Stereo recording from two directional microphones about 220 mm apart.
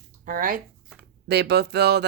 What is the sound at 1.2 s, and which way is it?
Speech, 50° right (ahead or behind).